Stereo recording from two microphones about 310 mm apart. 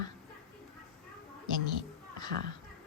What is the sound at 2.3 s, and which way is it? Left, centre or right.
Speech, right.